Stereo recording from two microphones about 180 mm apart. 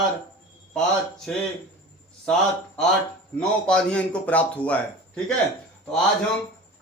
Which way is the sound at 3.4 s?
5° left (ahead or behind).